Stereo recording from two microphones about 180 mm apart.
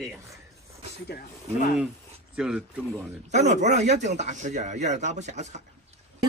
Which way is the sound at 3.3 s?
40° right (ahead or behind).